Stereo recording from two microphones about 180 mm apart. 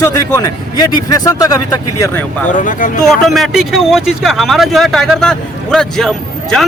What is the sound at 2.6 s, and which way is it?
Speech, 45° left (ahead or behind).